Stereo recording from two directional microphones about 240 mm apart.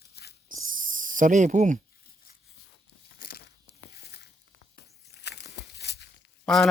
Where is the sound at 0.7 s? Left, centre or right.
Right.